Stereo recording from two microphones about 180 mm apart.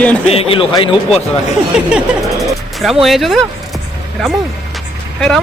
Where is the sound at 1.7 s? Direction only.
5° right (ahead or behind).